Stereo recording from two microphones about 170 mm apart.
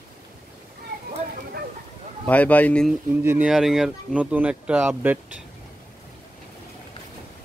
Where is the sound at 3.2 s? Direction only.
10° right (ahead or behind).